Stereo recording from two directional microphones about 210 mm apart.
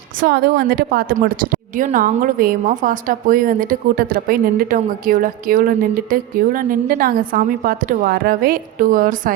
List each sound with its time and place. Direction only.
0.2 s a woman's voice: 50° right (ahead or behind)